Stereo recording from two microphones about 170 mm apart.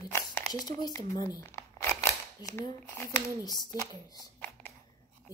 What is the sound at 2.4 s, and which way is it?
Speech, 20° left (ahead or behind).